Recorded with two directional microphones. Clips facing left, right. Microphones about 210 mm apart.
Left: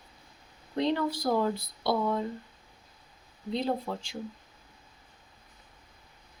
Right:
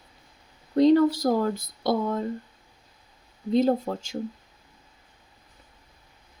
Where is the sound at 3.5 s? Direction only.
45° right (ahead or behind).